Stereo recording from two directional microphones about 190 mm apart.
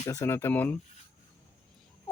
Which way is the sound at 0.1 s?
15° left (ahead or behind).